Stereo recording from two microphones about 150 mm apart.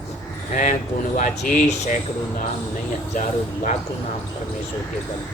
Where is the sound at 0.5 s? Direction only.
60° left (ahead or behind).